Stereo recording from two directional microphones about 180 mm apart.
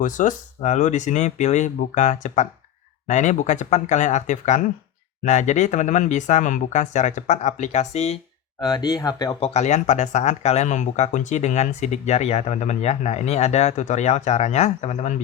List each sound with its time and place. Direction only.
0.0 s speech: 45° left (ahead or behind)
8.6 s speech: 20° left (ahead or behind)
9.5 s speech: 40° left (ahead or behind)